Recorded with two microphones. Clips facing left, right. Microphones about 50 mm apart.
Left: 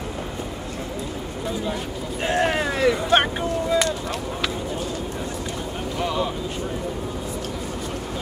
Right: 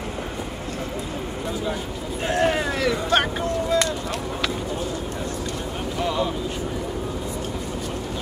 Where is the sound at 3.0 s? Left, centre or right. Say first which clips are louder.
Left 2 dB; left.